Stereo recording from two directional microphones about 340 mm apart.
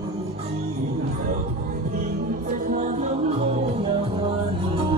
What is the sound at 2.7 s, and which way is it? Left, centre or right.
Music, right.